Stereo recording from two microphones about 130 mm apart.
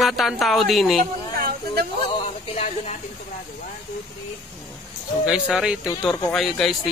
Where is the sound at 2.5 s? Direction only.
60° left (ahead or behind).